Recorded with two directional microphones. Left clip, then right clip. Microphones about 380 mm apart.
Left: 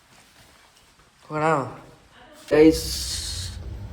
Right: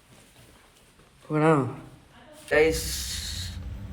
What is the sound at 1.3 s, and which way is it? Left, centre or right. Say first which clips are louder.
Speech: even; right.